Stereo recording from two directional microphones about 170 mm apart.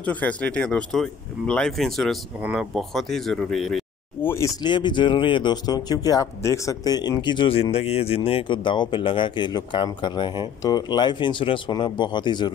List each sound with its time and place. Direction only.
0.0 s speech: 10° left (ahead or behind)
4.2 s speech: 15° left (ahead or behind)
4.6 s speech: 25° left (ahead or behind)